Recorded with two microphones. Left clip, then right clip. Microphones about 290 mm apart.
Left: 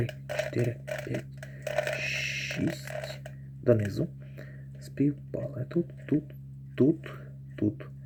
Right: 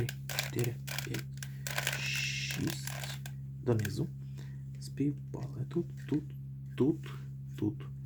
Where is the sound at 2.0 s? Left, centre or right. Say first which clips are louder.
Left 4 dB; centre.